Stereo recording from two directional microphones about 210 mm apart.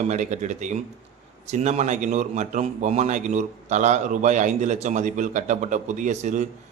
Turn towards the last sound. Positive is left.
turn(degrees=-35)  # may be behind; listen again after turning